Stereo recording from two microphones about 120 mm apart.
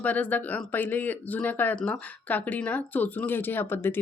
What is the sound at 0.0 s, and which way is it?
Speech, 15° left (ahead or behind).